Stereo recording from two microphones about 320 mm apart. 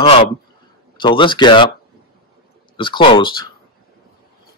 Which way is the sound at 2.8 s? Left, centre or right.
Centre.